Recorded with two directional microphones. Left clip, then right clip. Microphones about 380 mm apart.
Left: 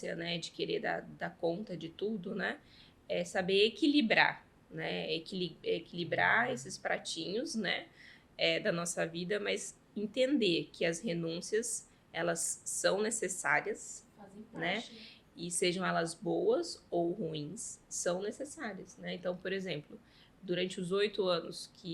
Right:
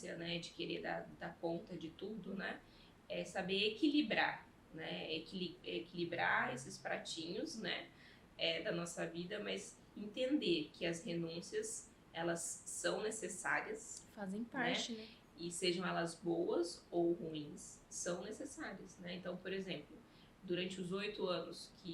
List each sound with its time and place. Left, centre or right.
0.0 s speech: left
15.4 s speech: left